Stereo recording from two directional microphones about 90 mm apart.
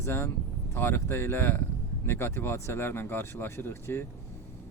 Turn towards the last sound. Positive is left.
turn(degrees=25)  # may be behind; listen again after turning